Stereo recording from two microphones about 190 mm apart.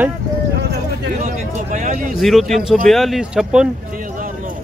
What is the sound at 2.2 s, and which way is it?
Speech, centre (ahead or behind).